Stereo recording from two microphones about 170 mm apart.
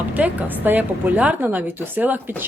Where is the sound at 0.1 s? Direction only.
10° right (ahead or behind).